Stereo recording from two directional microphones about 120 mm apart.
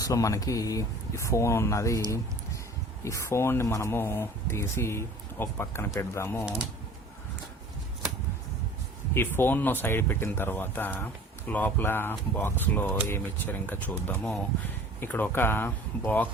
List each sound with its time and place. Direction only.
0.0 s speech: 25° left (ahead or behind)
3.0 s speech: 25° left (ahead or behind)
9.1 s speech: 20° left (ahead or behind)